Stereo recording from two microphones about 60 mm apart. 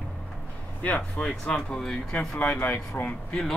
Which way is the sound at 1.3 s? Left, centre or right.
Centre.